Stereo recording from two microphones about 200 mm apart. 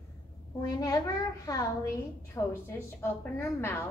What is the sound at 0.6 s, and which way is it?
A woman's voice, 15° left (ahead or behind).